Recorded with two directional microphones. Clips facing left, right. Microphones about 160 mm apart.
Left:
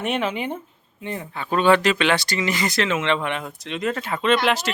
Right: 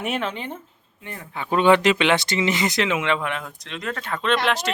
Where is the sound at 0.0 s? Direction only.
Centre (ahead or behind); by 1.3 s 20° left (ahead or behind).